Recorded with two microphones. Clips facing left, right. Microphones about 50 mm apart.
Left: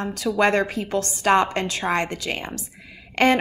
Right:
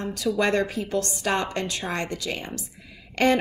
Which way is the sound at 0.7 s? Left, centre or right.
Left.